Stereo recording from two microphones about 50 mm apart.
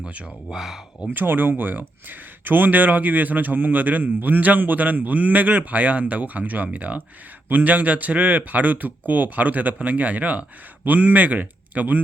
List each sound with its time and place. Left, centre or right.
0.5 s speech: centre
1.1 s speech: right